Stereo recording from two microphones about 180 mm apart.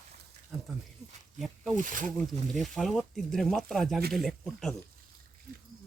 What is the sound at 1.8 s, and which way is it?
Speech, 45° right (ahead or behind).